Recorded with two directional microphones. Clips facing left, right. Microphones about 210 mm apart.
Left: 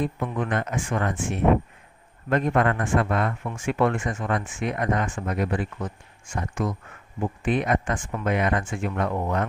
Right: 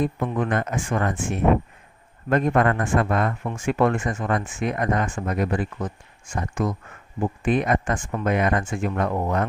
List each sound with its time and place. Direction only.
0.0 s speech: 45° right (ahead or behind)